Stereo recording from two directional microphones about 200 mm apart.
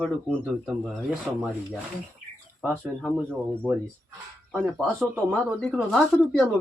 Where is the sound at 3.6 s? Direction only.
5° left (ahead or behind).